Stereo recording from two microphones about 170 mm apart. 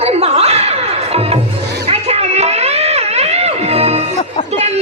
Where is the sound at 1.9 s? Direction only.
40° right (ahead or behind).